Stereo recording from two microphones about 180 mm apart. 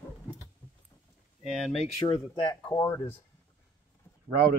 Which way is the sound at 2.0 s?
25° left (ahead or behind).